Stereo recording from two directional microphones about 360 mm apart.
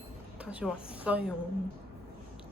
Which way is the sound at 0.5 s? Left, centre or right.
Centre.